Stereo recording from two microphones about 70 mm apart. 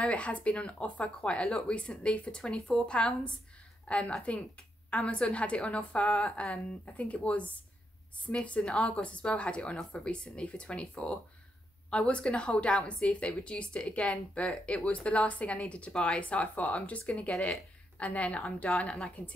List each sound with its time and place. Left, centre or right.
0.0 s a woman's voice: centre